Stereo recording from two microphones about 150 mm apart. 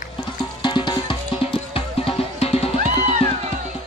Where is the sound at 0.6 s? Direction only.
30° left (ahead or behind).